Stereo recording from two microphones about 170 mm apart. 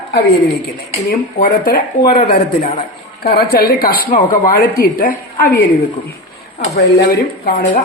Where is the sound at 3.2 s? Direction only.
60° left (ahead or behind).